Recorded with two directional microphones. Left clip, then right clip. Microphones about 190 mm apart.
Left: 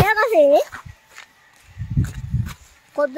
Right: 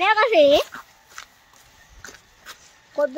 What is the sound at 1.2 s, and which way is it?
Walk, 15° right (ahead or behind).